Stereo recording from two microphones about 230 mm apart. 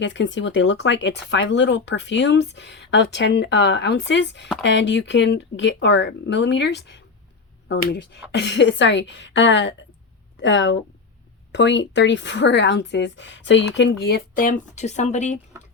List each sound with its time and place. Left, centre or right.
0.0 s speech: left